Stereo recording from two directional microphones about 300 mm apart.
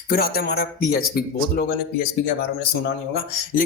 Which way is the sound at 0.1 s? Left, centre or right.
Left.